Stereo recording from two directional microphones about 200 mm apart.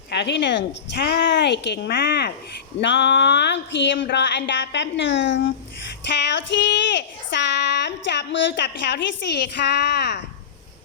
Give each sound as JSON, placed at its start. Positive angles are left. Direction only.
{"t": 0.1, "sound": "child singing", "side_deg": 60}